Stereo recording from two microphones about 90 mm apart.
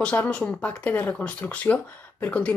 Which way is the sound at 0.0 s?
15° left (ahead or behind).